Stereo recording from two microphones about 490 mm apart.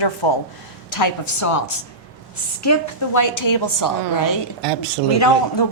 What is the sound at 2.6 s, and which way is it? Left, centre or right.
A woman's voice, left.